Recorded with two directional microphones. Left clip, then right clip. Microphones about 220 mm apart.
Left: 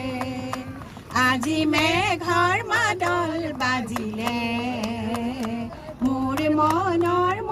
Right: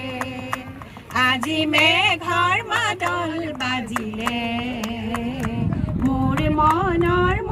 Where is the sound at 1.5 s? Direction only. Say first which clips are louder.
Right 4 dB; 50° left (ahead or behind); by 5.5 s 35° left (ahead or behind).